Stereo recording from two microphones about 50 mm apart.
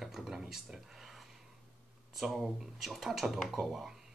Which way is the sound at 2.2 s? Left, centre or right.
Centre.